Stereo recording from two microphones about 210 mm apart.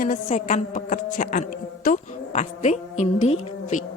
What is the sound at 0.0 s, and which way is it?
A woman's voice, 35° left (ahead or behind).